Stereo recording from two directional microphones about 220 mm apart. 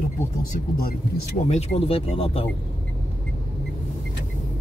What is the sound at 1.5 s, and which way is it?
Speech, 30° left (ahead or behind).